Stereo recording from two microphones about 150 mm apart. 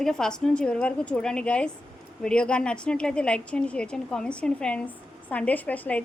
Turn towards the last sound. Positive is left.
turn(degrees=10)  # may be behind; listen again after turning